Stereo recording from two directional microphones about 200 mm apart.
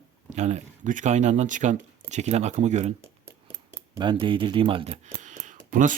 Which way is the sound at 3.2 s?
15° right (ahead or behind).